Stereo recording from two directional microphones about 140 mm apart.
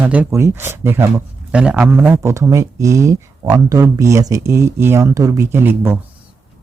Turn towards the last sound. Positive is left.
turn(degrees=-15)  # may be behind; listen again after turning